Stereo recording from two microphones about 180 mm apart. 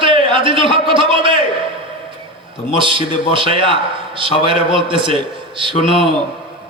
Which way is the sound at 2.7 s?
30° right (ahead or behind).